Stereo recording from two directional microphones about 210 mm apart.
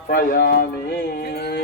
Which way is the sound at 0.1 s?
45° left (ahead or behind).